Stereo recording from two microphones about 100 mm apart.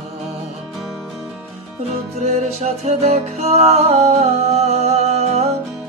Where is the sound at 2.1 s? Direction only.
90° right.